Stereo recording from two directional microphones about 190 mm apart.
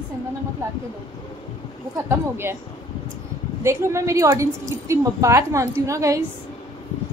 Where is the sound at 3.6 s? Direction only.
15° right (ahead or behind).